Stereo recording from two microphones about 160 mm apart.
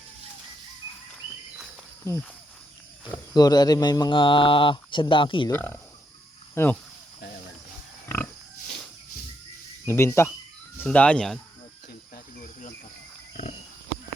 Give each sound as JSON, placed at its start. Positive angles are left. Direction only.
{"t": 3.3, "sound": "speech", "side_deg": 25}
{"t": 5.5, "sound": "speech", "side_deg": 10}
{"t": 8.0, "sound": "pig", "side_deg": 15}
{"t": 9.8, "sound": "speech", "side_deg": 15}
{"t": 12.1, "sound": "cricket", "side_deg": 60}